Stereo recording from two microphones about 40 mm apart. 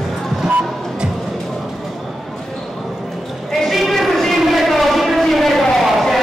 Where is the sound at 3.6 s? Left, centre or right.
Centre.